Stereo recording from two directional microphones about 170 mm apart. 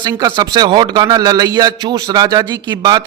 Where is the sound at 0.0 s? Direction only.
20° right (ahead or behind).